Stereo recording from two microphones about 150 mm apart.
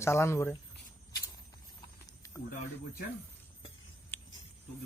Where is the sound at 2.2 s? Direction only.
25° left (ahead or behind).